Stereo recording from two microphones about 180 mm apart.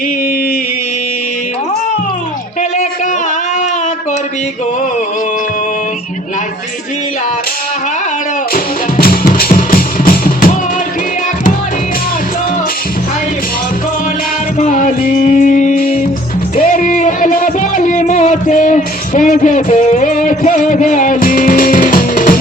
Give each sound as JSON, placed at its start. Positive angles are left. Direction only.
{"t": 8.5, "sound": "music", "side_deg": 55}
{"t": 14.6, "sound": "music", "side_deg": 40}